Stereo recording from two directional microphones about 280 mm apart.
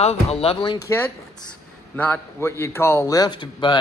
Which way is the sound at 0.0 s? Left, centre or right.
Left.